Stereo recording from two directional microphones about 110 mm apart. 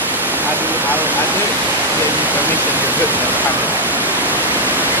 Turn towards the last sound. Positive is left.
turn(degrees=-15)  # may be behind; listen again after turning